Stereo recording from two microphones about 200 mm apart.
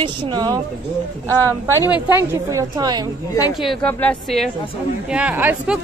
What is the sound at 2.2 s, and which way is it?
Speech, 15° right (ahead or behind).